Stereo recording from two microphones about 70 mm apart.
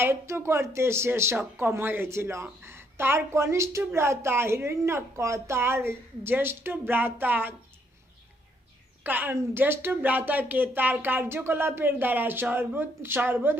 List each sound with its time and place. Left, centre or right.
0.0 s a woman's voice: right
9.0 s speech: right